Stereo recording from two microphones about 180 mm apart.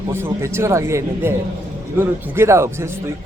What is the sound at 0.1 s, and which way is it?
A man's voice, 15° right (ahead or behind).